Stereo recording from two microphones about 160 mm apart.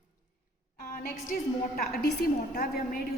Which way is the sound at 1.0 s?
65° left (ahead or behind).